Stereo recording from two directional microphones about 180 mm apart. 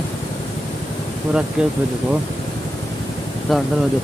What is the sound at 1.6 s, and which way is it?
Speech, 5° right (ahead or behind).